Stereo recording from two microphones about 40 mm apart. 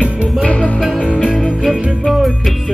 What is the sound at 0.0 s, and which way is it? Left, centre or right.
Music, left.